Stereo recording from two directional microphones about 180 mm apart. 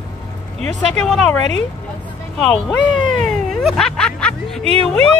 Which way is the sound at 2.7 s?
5° left (ahead or behind).